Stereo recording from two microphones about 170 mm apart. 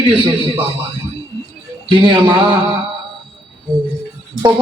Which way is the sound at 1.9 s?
25° right (ahead or behind).